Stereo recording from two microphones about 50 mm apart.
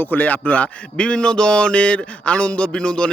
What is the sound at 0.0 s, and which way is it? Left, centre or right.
A man's voice, left.